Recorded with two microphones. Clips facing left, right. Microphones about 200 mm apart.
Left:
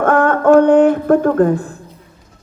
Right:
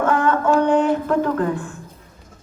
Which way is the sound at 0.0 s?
55° left (ahead or behind).